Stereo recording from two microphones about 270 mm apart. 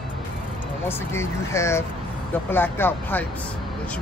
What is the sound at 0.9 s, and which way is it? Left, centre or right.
Speech, centre.